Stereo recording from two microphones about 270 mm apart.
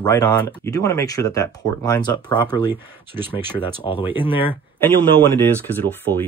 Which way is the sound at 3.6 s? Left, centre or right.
Centre.